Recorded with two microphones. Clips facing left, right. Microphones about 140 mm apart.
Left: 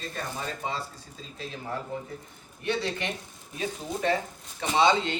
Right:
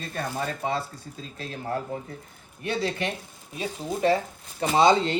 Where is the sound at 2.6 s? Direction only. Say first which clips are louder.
Right 2 dB; 40° right (ahead or behind).